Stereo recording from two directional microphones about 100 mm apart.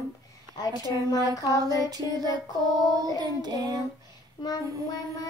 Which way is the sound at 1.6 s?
40° right (ahead or behind).